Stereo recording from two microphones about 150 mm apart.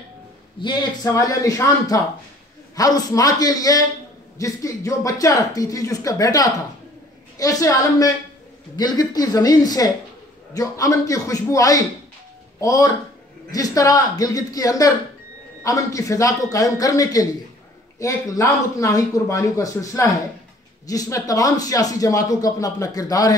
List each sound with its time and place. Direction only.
0.6 s speech: 30° left (ahead or behind)